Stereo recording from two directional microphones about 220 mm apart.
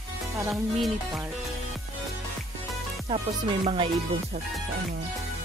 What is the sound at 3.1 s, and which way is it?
Music, 20° right (ahead or behind).